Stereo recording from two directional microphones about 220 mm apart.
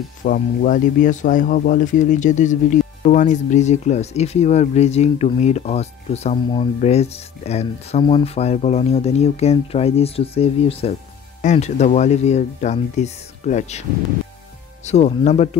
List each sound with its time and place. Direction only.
0.2 s speech: 40° left (ahead or behind)
14.9 s speech: 30° left (ahead or behind)